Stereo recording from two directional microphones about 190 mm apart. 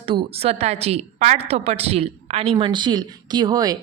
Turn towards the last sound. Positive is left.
turn(degrees=-20)  # may be behind; listen again after turning